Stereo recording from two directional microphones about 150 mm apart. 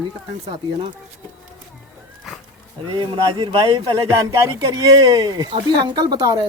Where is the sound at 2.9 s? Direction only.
35° right (ahead or behind).